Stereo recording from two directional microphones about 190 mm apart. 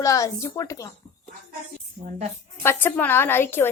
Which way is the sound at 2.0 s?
40° right (ahead or behind).